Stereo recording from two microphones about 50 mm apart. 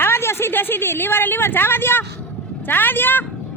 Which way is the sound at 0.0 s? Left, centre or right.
Left.